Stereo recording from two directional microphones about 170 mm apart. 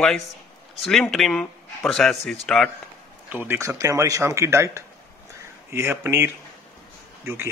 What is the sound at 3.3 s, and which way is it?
Speech, 10° right (ahead or behind).